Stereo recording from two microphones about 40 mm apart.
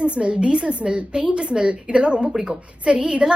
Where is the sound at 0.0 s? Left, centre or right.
Right.